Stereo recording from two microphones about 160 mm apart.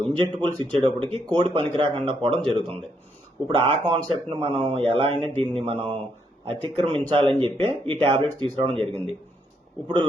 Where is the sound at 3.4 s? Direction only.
10° left (ahead or behind).